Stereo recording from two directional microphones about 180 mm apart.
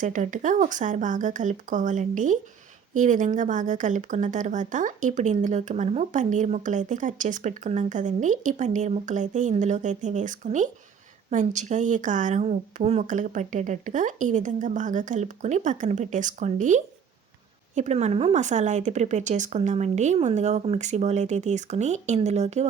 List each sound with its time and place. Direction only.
0.0 s speech: 45° right (ahead or behind)